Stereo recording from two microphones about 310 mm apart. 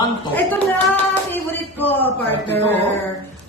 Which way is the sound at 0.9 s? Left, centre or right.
Centre.